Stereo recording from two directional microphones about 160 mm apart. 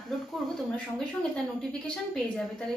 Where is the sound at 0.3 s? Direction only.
5° left (ahead or behind).